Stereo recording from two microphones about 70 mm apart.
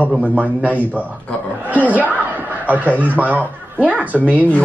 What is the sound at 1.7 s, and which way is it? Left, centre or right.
Chuckle, right.